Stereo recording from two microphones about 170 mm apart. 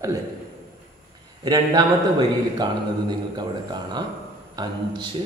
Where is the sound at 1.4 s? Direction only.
25° right (ahead or behind).